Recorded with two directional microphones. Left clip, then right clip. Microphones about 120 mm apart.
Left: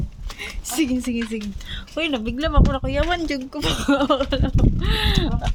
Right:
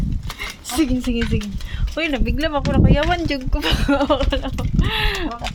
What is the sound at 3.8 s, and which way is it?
Speech, 40° left (ahead or behind).